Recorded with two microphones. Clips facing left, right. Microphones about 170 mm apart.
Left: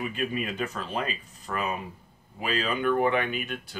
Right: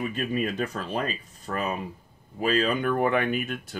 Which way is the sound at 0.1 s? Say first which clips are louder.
Right 3 dB; 40° right (ahead or behind).